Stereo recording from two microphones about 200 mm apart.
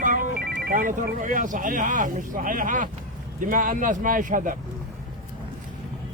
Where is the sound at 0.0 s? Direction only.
40° right (ahead or behind).